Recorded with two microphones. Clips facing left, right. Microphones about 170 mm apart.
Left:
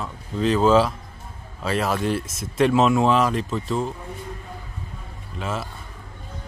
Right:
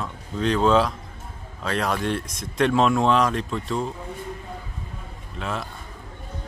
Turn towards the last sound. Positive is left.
turn(degrees=0)  # may be behind; listen again after turning